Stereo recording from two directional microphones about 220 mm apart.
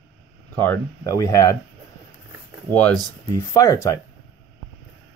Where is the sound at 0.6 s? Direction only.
15° left (ahead or behind).